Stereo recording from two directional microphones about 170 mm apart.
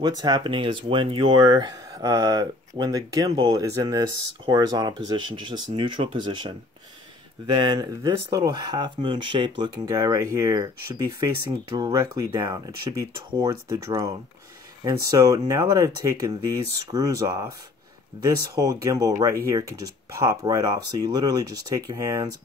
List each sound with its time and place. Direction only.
0.0 s speech: 25° right (ahead or behind)